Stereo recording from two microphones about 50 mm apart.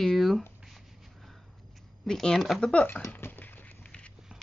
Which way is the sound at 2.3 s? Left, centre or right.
Centre.